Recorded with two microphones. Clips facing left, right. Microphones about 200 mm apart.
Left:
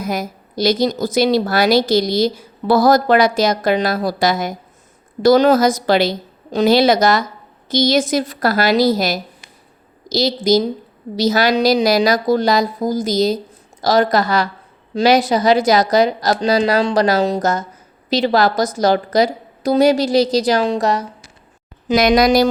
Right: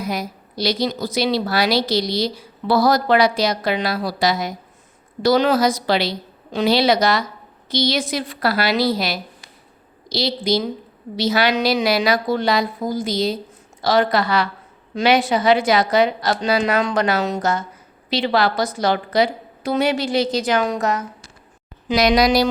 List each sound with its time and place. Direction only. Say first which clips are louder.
0.0 s a woman's voice: left 3 dB; 45° left (ahead or behind)
21.8 s a woman's voice: left 3 dB; 50° left (ahead or behind)